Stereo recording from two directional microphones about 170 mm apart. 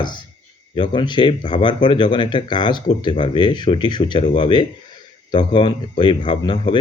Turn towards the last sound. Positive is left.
turn(degrees=30)  # may be behind; listen again after turning